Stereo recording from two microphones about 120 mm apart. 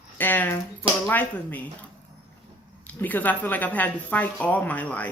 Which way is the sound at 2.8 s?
15° left (ahead or behind).